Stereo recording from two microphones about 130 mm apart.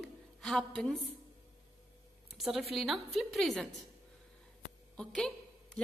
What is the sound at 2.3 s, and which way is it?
A woman's voice, centre (ahead or behind).